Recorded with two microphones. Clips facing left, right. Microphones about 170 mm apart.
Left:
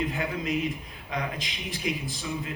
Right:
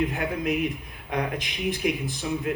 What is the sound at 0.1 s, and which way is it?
A man's voice, 60° right (ahead or behind).